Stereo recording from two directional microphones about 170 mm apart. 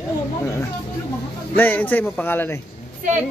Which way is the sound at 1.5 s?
10° left (ahead or behind).